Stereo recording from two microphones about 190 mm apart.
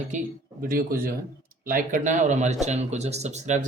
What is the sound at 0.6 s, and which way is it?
Speech, 50° right (ahead or behind).